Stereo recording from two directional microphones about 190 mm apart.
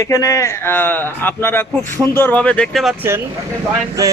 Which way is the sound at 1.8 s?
20° right (ahead or behind).